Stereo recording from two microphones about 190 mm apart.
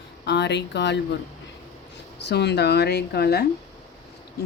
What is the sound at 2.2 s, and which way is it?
Speech, 60° left (ahead or behind).